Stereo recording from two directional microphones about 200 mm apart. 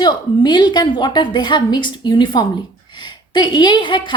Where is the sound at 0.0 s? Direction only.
20° left (ahead or behind).